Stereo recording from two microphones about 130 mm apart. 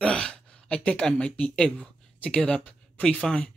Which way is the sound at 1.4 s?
5° left (ahead or behind).